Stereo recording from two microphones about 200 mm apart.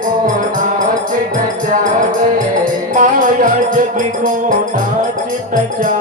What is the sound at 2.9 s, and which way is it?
Music, 40° right (ahead or behind).